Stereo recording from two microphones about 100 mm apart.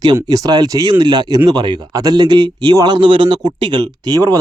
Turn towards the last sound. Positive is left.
turn(degrees=-40)  # may be behind; listen again after turning